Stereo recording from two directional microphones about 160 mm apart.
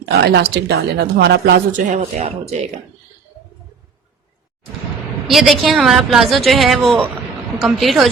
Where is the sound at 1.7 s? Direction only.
45° right (ahead or behind).